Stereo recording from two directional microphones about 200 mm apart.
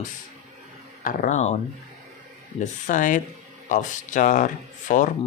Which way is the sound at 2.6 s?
40° left (ahead or behind).